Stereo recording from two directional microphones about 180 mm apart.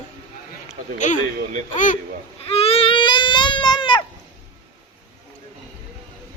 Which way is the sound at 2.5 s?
35° left (ahead or behind).